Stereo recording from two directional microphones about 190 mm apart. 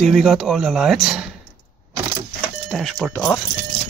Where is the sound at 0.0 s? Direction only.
Centre (ahead or behind).